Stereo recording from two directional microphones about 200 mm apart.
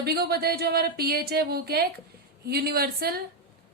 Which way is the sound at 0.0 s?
50° right (ahead or behind).